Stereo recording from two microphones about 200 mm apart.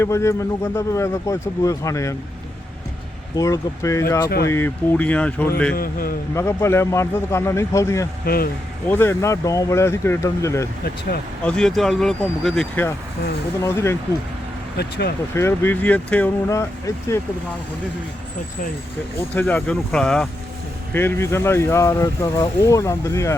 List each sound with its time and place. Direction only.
0.0 s speech: 15° left (ahead or behind)
3.3 s speech: 15° left (ahead or behind)
5.7 s a man's voice: 45° left (ahead or behind)
6.3 s speech: 15° left (ahead or behind)
8.2 s speech: 50° left (ahead or behind)
8.9 s speech: 10° left (ahead or behind)
11.4 s speech: 5° left (ahead or behind)
14.8 s speech: 55° left (ahead or behind)
15.4 s speech: 10° left (ahead or behind)
19.3 s speech: 10° left (ahead or behind)